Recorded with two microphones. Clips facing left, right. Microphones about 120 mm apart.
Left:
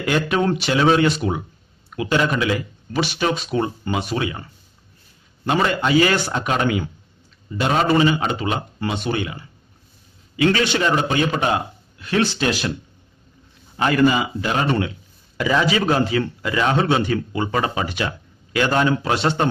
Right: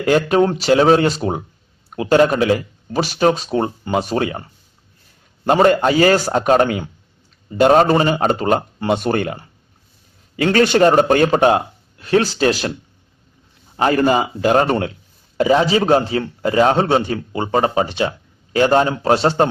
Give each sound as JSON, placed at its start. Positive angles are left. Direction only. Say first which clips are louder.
{"t": 0.0, "sound": "speech", "louder": "right 5 dB", "side_deg": -40}
{"t": 5.5, "sound": "speech", "louder": "right 6 dB", "side_deg": -45}
{"t": 13.7, "sound": "speech", "louder": "right 2 dB", "side_deg": -35}
{"t": 15.4, "sound": "speech", "louder": "right 5 dB", "side_deg": -35}